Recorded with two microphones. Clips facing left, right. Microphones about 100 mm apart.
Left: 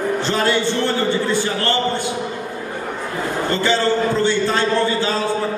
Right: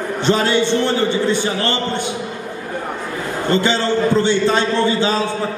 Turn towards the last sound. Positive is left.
turn(degrees=-20)  # may be behind; listen again after turning